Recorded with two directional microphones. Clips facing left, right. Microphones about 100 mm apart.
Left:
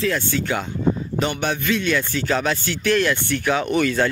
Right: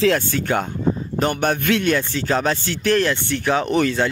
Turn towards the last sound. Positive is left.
turn(degrees=-35)  # may be behind; listen again after turning